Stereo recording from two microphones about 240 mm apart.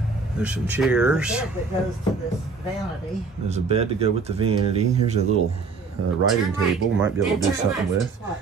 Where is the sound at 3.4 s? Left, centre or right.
Right.